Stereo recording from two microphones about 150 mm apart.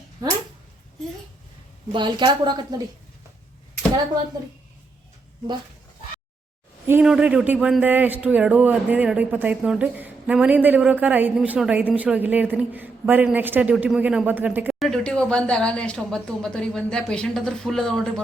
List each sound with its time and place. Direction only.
1.9 s a woman's voice: 30° right (ahead or behind)
7.0 s a man's voice: 5° right (ahead or behind)
14.8 s speech: 5° left (ahead or behind)